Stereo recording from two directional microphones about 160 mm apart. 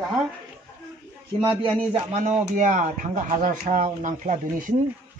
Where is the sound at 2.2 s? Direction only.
50° right (ahead or behind).